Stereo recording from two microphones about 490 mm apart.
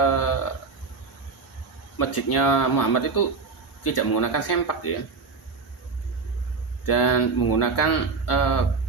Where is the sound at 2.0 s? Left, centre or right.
Left.